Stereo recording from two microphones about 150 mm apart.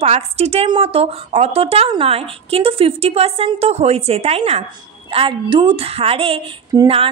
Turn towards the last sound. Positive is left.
turn(degrees=-40)  # may be behind; listen again after turning